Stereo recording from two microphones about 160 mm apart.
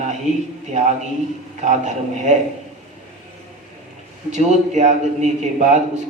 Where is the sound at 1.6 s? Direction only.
50° right (ahead or behind).